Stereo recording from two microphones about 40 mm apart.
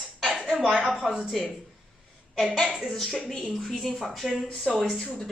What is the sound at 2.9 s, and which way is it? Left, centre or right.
Speech, centre.